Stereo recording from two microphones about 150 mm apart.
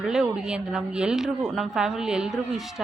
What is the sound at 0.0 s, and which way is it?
A woman's voice, 5° right (ahead or behind).